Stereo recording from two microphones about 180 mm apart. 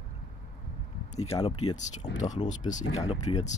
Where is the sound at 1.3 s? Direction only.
20° left (ahead or behind).